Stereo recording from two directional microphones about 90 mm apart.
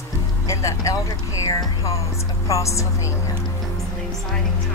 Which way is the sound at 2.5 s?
35° left (ahead or behind).